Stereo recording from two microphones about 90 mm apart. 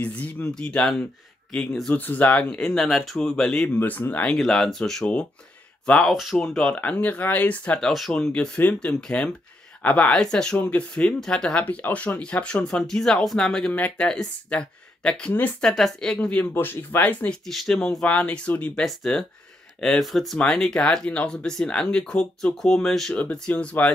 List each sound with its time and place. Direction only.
0.0 s speech: 15° left (ahead or behind)
2.0 s speech: 20° left (ahead or behind)
3.7 s speech: 20° left (ahead or behind)
4.4 s speech: 5° left (ahead or behind)
7.9 s speech: centre (ahead or behind)
16.5 s speech: 25° left (ahead or behind)
17.5 s speech: 5° left (ahead or behind)